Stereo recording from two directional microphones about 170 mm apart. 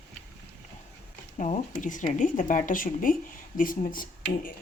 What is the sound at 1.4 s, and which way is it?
Speech, 50° left (ahead or behind).